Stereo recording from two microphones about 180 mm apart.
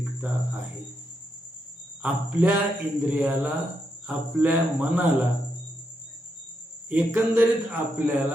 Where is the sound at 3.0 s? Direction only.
10° right (ahead or behind).